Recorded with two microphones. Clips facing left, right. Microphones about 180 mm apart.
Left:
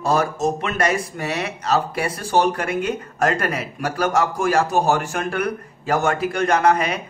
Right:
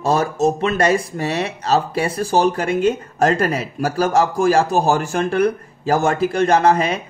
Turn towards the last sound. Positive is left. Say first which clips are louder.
# right 3 dB
turn(degrees=-30)  # may be behind; listen again after turning